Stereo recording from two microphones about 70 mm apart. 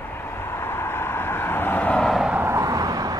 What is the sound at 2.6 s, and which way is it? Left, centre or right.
Vehicle, right.